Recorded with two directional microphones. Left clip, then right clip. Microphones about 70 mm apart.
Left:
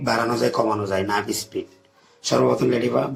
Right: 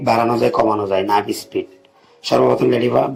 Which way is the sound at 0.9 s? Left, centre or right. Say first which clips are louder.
Right 6 dB; right.